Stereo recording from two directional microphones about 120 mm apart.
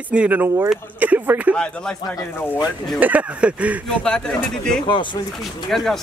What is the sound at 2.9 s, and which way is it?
Speech, 15° right (ahead or behind).